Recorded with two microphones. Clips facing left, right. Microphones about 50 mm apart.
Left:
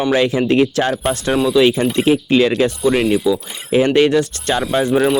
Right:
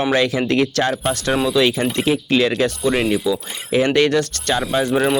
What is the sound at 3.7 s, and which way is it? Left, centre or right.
Speech, centre.